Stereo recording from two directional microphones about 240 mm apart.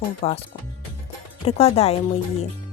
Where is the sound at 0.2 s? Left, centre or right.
Left.